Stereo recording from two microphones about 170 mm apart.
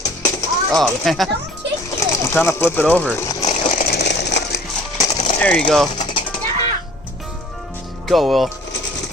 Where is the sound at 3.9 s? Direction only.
75° left (ahead or behind).